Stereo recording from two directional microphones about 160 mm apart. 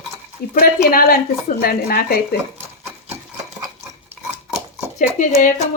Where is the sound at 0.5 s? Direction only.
65° left (ahead or behind).